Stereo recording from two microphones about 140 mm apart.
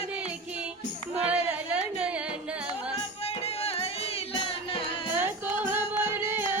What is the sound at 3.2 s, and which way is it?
Music, 45° left (ahead or behind).